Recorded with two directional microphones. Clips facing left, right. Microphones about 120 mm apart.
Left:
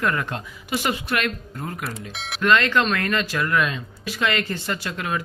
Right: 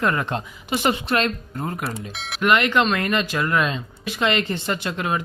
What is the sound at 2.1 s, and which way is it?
Speech, centre (ahead or behind).